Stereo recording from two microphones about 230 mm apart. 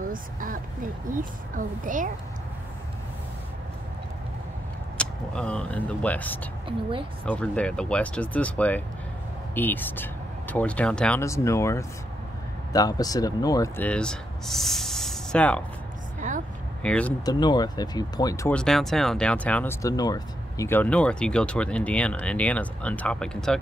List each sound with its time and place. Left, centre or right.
0.1 s speech: right
4.9 s speech: centre
16.2 s a sound: right
16.8 s speech: centre
17.2 s speech: centre
18.6 s speech: centre